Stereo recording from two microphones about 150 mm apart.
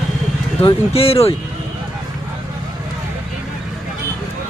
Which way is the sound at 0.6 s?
40° left (ahead or behind).